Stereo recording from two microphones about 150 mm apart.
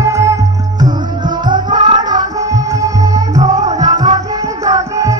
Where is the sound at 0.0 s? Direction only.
20° right (ahead or behind).